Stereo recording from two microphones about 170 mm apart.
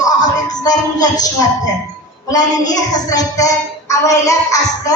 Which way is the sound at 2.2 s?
20° left (ahead or behind).